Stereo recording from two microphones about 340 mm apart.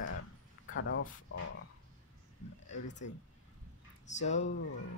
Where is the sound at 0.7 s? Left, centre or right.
Left.